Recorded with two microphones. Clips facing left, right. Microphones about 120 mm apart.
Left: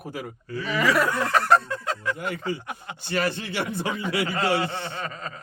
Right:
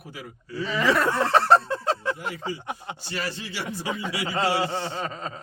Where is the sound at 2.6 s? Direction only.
25° right (ahead or behind).